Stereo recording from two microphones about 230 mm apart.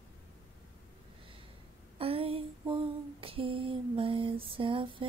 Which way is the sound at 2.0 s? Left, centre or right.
Right.